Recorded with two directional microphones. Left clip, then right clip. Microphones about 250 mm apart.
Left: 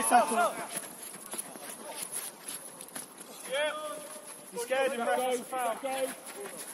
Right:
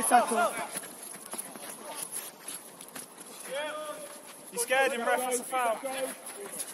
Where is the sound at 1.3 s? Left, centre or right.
Centre.